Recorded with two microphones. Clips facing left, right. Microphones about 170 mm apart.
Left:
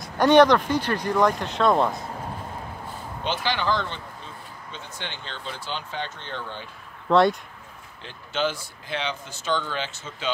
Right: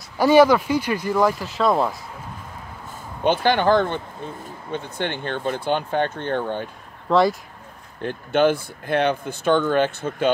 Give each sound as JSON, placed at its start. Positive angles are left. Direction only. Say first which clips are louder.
{"t": 0.0, "sound": "speech", "louder": "right 2 dB", "side_deg": -5}
{"t": 3.3, "sound": "speech", "louder": "right 8 dB", "side_deg": -50}
{"t": 7.1, "sound": "speech", "louder": "right 1 dB", "side_deg": 0}
{"t": 8.0, "sound": "speech", "louder": "right 9 dB", "side_deg": -55}